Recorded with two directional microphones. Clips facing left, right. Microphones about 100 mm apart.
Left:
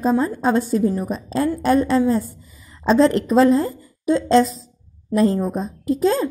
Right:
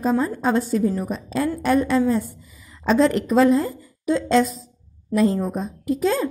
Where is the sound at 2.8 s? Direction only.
30° left (ahead or behind).